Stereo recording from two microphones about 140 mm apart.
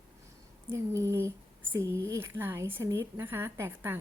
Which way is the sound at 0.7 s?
20° right (ahead or behind).